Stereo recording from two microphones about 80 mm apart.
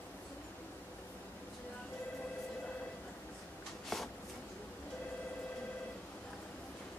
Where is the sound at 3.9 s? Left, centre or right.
Centre.